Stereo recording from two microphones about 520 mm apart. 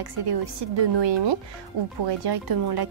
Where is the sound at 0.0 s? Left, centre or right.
Right.